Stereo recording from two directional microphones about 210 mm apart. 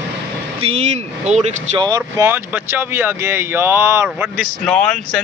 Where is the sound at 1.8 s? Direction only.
15° right (ahead or behind).